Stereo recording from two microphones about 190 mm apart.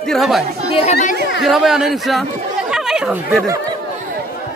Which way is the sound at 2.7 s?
5° right (ahead or behind).